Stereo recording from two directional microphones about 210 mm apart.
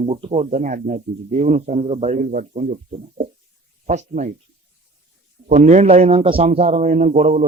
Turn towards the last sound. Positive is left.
turn(degrees=-35)  # may be behind; listen again after turning